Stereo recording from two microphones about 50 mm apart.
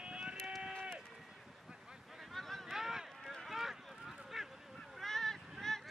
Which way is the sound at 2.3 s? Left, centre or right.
Centre.